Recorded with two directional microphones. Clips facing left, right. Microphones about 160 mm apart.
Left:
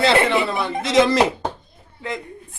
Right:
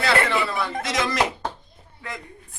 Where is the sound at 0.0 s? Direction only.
25° left (ahead or behind).